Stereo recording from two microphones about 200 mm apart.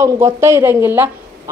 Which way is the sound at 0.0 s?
15° right (ahead or behind).